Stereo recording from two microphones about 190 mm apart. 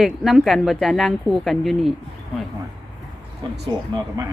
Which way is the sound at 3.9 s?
20° right (ahead or behind).